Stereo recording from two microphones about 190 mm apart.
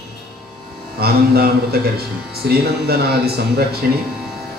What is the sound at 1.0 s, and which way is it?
Speech, 55° right (ahead or behind).